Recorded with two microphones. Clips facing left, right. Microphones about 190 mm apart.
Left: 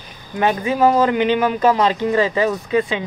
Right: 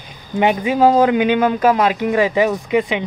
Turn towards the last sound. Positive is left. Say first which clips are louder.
# right 1 dB
turn(degrees=-15)  # may be behind; listen again after turning